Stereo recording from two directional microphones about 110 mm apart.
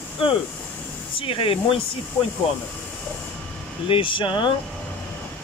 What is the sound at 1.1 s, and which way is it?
Speech, 55° left (ahead or behind).